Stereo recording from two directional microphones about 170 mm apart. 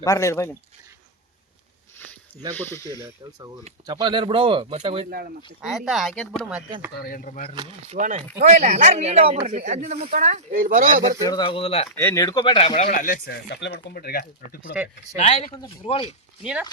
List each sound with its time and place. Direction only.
0.0 s speech: 20° left (ahead or behind)
2.6 s speech: 15° left (ahead or behind)
3.0 s speech: 20° right (ahead or behind); by 5.0 s 35° right (ahead or behind)
5.6 s speech: centre (ahead or behind)
7.0 s speech: 55° left (ahead or behind)
7.9 s speech: 45° right (ahead or behind)
11.2 s speech: 25° left (ahead or behind)
11.9 s speech: 15° left (ahead or behind); by 12.9 s 35° left (ahead or behind)
12.9 s speech: 50° left (ahead or behind)
15.2 s speech: 40° left (ahead or behind)
16.4 s speech: 5° right (ahead or behind)